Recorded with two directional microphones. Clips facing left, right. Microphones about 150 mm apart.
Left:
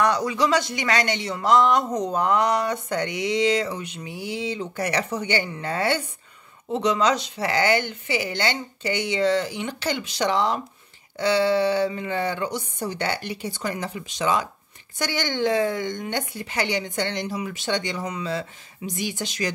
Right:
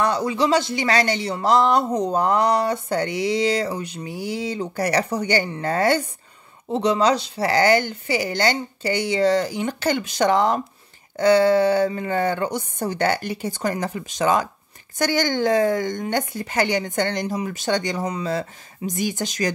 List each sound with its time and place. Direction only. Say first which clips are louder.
0.0 s a woman's voice: right 1 dB; 30° right (ahead or behind); by 19.5 s 45° right (ahead or behind)